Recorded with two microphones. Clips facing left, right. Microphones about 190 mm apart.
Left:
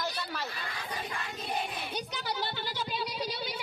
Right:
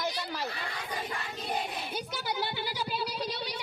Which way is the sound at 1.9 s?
10° right (ahead or behind).